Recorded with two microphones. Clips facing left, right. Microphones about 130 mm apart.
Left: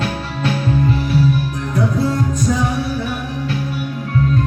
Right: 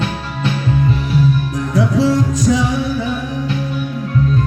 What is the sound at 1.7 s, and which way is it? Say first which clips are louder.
Music: right 4 dB; 90° right.